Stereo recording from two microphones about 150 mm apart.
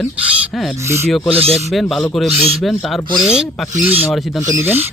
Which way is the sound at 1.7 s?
Centre (ahead or behind).